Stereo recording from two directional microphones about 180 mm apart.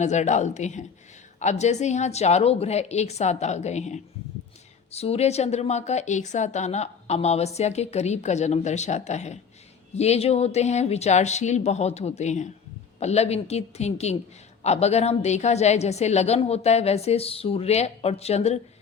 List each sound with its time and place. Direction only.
0.0 s a woman's voice: 40° left (ahead or behind)